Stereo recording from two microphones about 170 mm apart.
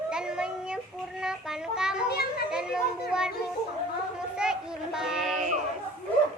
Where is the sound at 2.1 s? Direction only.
65° left (ahead or behind).